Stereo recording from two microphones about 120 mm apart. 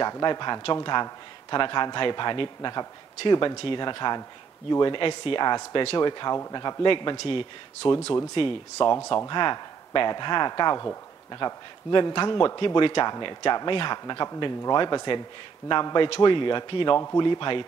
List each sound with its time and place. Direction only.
0.0 s a man's voice: 35° left (ahead or behind)
16.9 s a man's voice: 25° left (ahead or behind)
17.2 s a man's voice: 40° left (ahead or behind)